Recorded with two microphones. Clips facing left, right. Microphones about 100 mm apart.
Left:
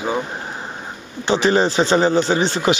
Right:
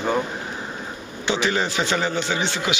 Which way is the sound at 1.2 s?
35° left (ahead or behind).